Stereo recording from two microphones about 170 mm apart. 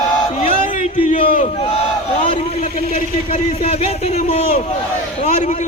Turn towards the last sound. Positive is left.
turn(degrees=35)  # may be behind; listen again after turning